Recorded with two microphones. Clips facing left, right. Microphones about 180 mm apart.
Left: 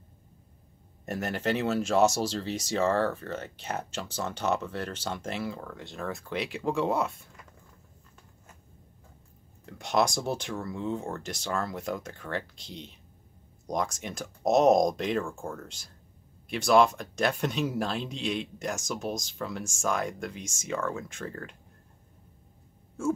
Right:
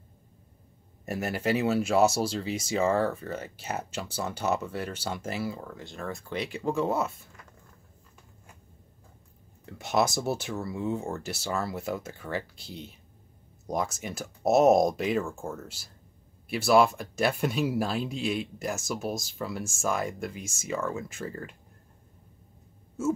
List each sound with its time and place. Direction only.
1.0 s speech: 5° right (ahead or behind)
9.7 s speech: 5° right (ahead or behind)